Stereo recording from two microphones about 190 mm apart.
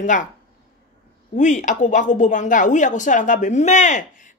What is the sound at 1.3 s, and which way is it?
Speech, 40° left (ahead or behind).